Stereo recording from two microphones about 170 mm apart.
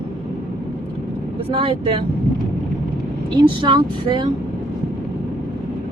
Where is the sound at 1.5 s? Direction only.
30° right (ahead or behind).